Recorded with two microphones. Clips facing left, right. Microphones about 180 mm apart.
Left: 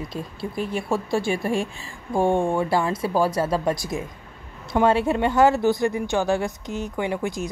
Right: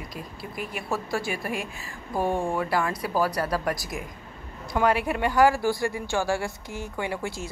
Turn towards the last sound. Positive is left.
turn(degrees=20)  # may be behind; listen again after turning